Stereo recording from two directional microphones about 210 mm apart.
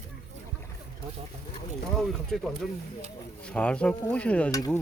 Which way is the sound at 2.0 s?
Centre (ahead or behind).